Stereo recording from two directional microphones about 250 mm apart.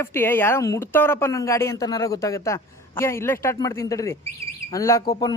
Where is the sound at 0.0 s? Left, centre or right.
Centre.